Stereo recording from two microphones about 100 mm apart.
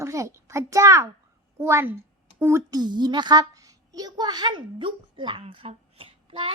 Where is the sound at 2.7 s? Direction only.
45° right (ahead or behind).